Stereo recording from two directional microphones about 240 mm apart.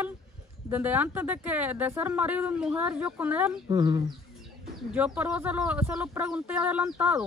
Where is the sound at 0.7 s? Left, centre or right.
Centre.